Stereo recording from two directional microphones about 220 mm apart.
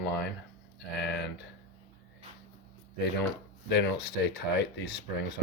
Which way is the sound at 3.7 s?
50° left (ahead or behind).